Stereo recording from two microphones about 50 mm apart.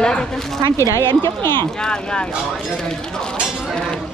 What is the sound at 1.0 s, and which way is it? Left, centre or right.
Speech, left.